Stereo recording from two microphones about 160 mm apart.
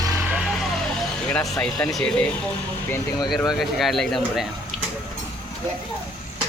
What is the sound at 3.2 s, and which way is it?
Speech, centre (ahead or behind).